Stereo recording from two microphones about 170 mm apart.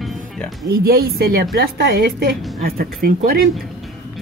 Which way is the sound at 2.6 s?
60° right (ahead or behind).